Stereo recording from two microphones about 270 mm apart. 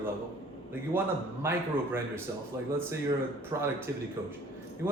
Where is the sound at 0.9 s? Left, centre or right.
Centre.